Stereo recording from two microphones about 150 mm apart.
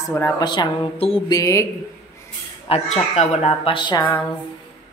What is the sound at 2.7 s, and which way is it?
Speech, 45° left (ahead or behind).